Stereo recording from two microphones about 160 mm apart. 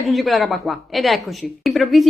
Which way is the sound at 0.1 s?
Centre (ahead or behind).